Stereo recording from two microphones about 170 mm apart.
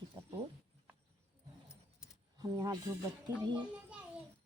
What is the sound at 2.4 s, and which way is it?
Speech, 20° right (ahead or behind).